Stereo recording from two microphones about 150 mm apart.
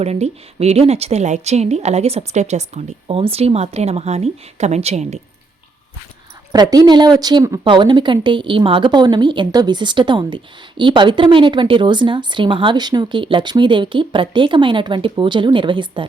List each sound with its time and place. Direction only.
0.0 s speech: 45° right (ahead or behind)
6.5 s a woman's voice: 25° right (ahead or behind)